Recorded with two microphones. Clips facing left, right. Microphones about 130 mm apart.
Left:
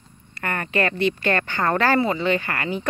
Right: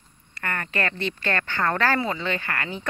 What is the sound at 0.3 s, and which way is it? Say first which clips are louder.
Speech: left 4 dB; 20° left (ahead or behind).